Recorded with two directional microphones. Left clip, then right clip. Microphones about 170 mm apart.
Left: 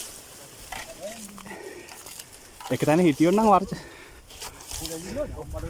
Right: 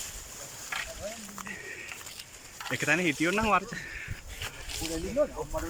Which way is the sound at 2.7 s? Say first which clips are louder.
Left 6 dB; 30° left (ahead or behind).